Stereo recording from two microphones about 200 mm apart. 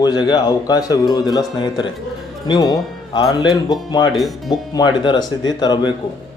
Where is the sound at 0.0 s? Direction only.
20° left (ahead or behind).